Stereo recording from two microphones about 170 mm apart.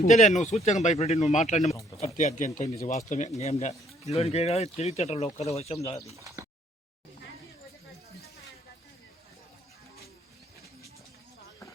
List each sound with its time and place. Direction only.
0.0 s speech: 45° left (ahead or behind)
6.1 s bird: 20° right (ahead or behind)